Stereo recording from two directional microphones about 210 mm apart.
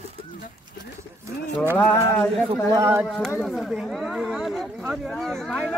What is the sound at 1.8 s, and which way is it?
Speech, 5° left (ahead or behind).